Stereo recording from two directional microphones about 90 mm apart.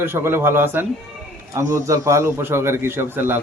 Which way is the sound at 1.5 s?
35° right (ahead or behind).